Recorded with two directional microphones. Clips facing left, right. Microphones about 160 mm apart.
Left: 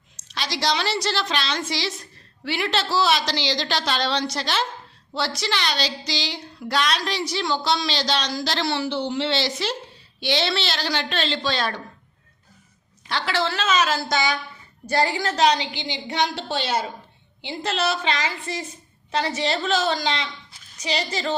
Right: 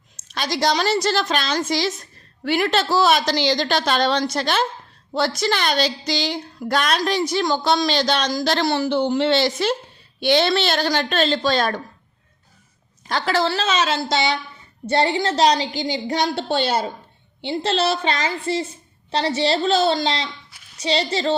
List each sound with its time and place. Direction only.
0.2 s speech: 50° right (ahead or behind)
13.1 s a woman's voice: 45° right (ahead or behind)